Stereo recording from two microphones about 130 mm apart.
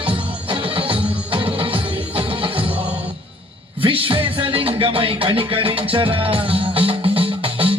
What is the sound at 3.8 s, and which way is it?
Music, 40° right (ahead or behind).